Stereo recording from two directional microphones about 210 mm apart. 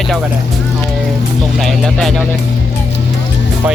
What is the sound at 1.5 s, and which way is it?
Speech, centre (ahead or behind).